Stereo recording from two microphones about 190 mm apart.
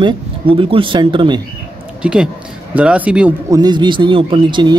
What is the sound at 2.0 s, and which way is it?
Speech, 5° right (ahead or behind).